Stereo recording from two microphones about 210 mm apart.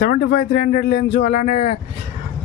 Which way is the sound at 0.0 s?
45° left (ahead or behind).